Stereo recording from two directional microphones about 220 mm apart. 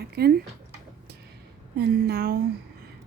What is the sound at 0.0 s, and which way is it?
Speech, 45° right (ahead or behind).